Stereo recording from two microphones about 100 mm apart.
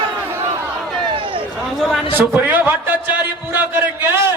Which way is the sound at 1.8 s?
Centre (ahead or behind).